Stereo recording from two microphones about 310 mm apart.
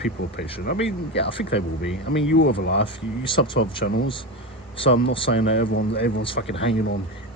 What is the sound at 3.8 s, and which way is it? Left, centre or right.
Speech, left.